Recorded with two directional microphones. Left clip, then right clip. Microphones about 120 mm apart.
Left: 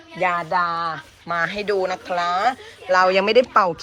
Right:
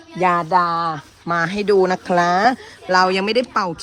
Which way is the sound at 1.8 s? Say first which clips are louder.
Right 6 dB; 60° right (ahead or behind).